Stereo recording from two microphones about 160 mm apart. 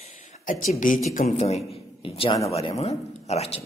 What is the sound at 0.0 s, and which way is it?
Speech, 50° left (ahead or behind).